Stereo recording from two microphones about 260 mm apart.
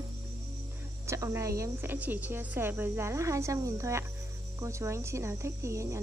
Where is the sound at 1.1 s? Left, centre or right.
Centre.